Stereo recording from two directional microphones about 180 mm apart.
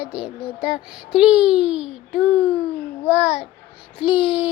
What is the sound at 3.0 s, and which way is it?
Speech, 35° left (ahead or behind).